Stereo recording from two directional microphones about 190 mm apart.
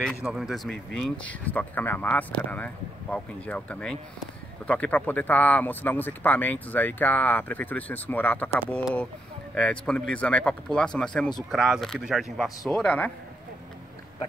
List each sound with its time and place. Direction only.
0.0 s speech: centre (ahead or behind)